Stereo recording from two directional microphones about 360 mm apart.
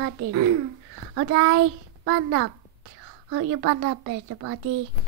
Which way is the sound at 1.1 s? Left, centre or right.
Right.